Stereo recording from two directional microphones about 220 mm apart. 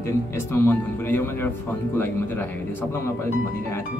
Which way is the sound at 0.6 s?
10° left (ahead or behind).